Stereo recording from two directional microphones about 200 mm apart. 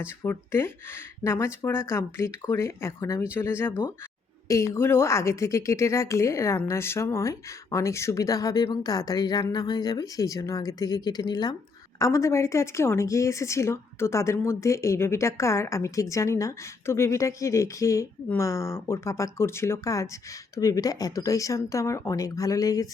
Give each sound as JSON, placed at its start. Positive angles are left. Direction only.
{"t": 0.0, "sound": "a woman's voice", "side_deg": 10}